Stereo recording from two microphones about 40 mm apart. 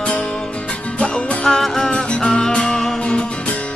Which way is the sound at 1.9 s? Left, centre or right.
Left.